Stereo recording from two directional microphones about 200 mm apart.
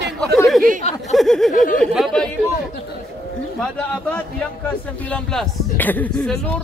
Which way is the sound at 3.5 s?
5° left (ahead or behind).